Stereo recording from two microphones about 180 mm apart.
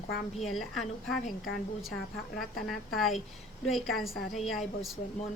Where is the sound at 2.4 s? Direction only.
Centre (ahead or behind).